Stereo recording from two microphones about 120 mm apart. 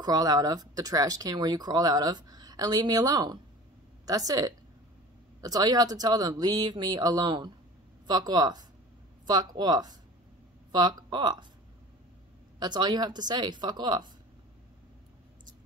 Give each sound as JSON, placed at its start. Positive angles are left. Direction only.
{"t": 0.0, "sound": "speech", "side_deg": -30}
{"t": 12.5, "sound": "speech", "side_deg": -35}